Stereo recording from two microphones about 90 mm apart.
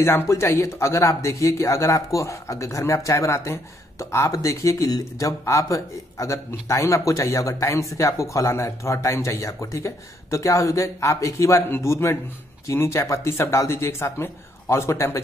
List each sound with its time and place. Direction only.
0.0 s speech: 30° left (ahead or behind)